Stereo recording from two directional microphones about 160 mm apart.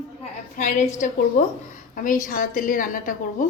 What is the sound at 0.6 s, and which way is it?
A woman's voice, 50° left (ahead or behind).